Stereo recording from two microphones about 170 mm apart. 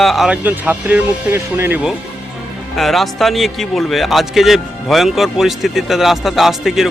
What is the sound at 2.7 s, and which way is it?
A man's voice, centre (ahead or behind).